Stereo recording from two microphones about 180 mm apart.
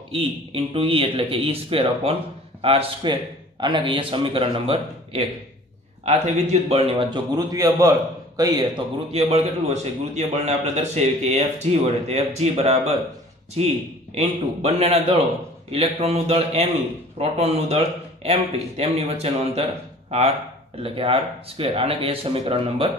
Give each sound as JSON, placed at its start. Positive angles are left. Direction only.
{"t": 0.1, "sound": "a man's voice", "side_deg": -30}
{"t": 9.2, "sound": "a man's voice", "side_deg": -35}